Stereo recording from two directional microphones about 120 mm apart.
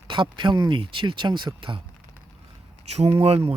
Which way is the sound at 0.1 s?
45° right (ahead or behind).